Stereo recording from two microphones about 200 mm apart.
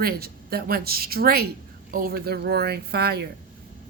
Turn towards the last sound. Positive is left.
turn(degrees=-50)  # may be behind; listen again after turning